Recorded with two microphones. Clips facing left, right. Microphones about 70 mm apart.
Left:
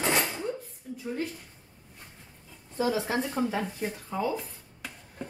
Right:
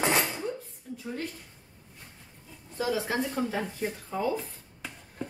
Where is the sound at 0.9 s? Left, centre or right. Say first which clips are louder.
Left 2 dB; centre.